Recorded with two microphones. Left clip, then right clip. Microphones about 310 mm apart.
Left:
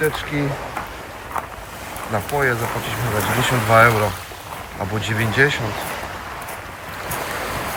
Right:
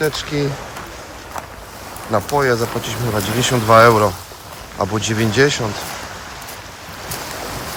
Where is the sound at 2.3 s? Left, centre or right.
Centre.